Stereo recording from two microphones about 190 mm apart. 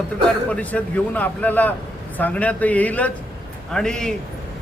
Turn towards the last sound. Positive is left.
turn(degrees=5)  # may be behind; listen again after turning